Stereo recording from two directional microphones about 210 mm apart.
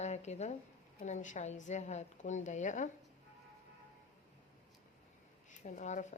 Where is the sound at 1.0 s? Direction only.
35° left (ahead or behind).